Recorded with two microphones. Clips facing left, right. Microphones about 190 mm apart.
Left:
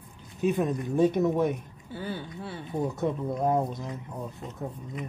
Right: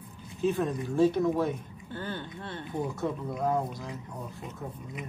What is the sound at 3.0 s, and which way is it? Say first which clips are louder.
Speech: left 3 dB; 20° left (ahead or behind).